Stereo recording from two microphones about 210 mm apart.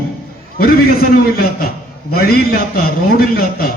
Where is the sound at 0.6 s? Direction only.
45° left (ahead or behind).